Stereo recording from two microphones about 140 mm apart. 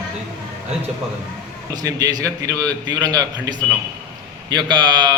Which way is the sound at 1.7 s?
25° right (ahead or behind).